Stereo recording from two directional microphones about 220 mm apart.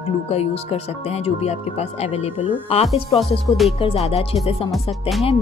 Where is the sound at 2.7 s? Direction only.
30° left (ahead or behind).